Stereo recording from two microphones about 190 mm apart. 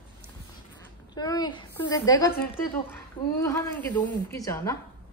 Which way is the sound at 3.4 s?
10° left (ahead or behind).